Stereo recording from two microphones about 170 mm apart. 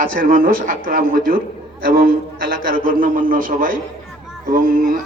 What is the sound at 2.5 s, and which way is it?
A man's voice, 60° right (ahead or behind).